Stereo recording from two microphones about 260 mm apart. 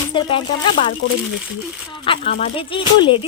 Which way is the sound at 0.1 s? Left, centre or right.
Centre.